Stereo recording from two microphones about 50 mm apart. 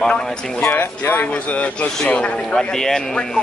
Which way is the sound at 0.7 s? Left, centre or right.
Left.